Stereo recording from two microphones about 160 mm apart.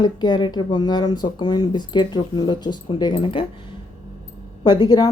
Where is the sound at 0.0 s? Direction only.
25° left (ahead or behind).